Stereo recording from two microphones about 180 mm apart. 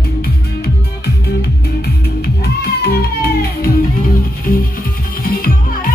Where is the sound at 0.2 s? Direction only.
60° left (ahead or behind).